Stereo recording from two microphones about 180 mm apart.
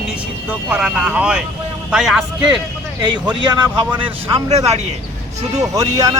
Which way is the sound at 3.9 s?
30° right (ahead or behind).